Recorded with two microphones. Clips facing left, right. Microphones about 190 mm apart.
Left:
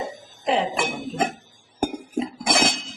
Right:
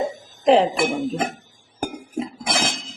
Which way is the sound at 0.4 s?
35° right (ahead or behind).